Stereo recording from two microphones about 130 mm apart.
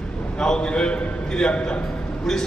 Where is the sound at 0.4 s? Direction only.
5° left (ahead or behind).